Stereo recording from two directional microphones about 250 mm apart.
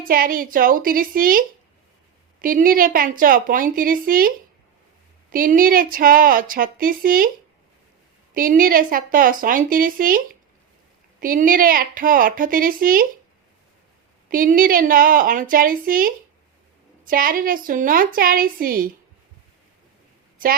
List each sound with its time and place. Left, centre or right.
0.0 s a woman's voice: right
5.3 s a woman's voice: right
8.3 s a woman's voice: right
14.3 s a woman's voice: right